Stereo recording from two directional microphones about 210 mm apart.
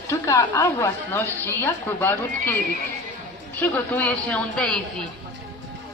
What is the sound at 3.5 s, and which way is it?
A woman's voice, 10° left (ahead or behind).